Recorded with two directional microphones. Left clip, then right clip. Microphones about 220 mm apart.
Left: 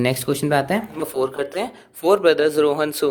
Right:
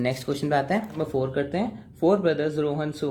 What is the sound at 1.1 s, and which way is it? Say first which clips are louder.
Speech: left 4 dB; 35° left (ahead or behind).